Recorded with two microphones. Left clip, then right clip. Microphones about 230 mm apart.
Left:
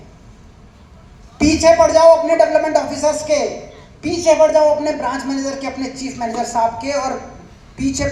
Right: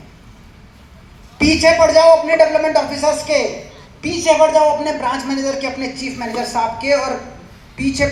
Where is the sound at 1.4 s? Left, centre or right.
Left.